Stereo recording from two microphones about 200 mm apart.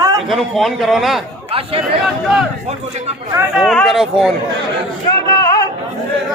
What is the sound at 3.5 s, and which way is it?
Speech, centre (ahead or behind).